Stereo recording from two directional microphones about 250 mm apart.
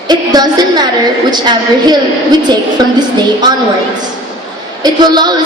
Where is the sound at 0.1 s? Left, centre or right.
Centre.